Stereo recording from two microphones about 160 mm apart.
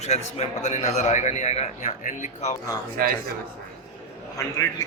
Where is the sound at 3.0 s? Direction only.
65° right (ahead or behind).